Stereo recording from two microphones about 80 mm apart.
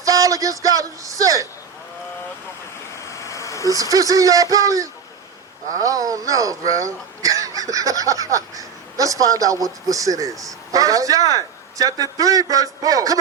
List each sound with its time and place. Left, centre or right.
0.0 s a man's voice: right
3.1 s vehicle: left
3.7 s a man's voice: right